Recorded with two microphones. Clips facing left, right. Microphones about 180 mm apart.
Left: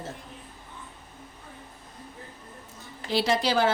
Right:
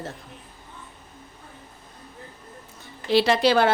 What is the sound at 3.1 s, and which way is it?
Speech, 70° right (ahead or behind).